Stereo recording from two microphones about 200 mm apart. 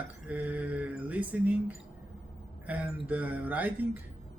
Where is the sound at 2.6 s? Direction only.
5° right (ahead or behind).